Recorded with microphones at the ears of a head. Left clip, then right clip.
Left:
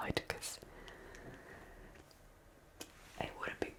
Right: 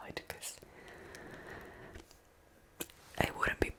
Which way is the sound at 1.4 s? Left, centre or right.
Right.